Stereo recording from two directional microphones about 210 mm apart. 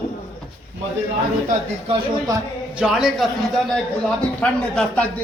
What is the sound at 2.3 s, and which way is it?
Speech, 15° right (ahead or behind).